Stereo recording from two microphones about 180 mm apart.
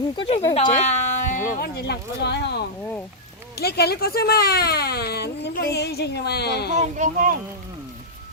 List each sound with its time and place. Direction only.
0.2 s speech: 35° left (ahead or behind); by 2.6 s 70° left (ahead or behind)
3.6 s speech: 60° left (ahead or behind)
6.7 s speech: 45° right (ahead or behind)